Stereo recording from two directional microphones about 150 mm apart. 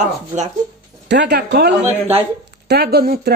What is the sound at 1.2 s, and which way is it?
Speech, 90° right.